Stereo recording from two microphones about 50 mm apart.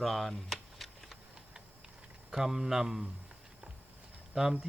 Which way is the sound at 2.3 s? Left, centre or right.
Centre.